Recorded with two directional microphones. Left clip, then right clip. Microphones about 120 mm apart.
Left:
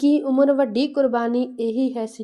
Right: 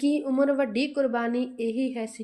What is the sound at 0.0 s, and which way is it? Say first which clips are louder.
A woman's voice: left 6 dB; 35° left (ahead or behind).